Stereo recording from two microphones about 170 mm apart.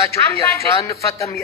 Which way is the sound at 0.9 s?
20° left (ahead or behind).